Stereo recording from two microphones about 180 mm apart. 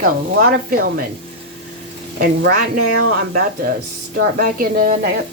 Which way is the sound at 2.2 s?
60° right (ahead or behind).